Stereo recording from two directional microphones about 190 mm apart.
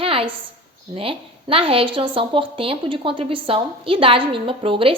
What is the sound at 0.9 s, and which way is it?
A woman's voice, 30° right (ahead or behind).